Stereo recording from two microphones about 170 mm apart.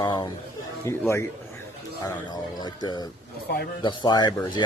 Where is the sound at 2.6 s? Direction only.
25° left (ahead or behind).